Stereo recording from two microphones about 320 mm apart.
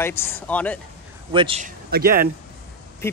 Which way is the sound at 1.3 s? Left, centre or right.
Centre.